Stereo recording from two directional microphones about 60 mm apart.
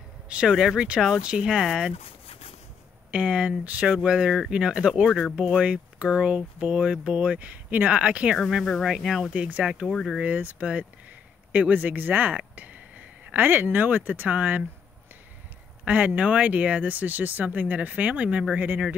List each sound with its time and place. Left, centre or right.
0.3 s speech: centre
3.1 s speech: centre
8.4 s speech: centre
9.3 s speech: right
9.8 s speech: centre
10.2 s speech: right
15.8 s speech: right